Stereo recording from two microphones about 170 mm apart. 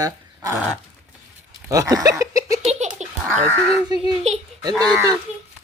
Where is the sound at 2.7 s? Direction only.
45° right (ahead or behind).